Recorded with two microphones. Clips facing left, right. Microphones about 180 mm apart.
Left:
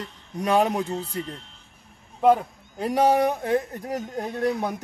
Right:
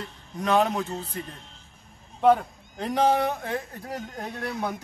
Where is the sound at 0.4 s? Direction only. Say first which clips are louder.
Left 2 dB; 10° left (ahead or behind).